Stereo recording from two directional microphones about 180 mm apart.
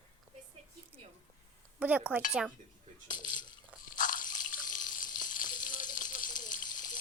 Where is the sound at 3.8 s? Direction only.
45° left (ahead or behind).